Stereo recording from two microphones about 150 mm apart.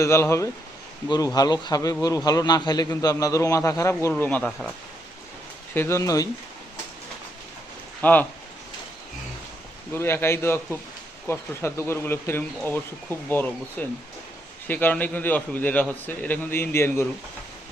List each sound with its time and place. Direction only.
0.0 s a man's voice: 20° left (ahead or behind)
5.7 s a man's voice: 15° left (ahead or behind)
8.0 s a man's voice: 10° left (ahead or behind)
9.9 s a man's voice: 15° left (ahead or behind)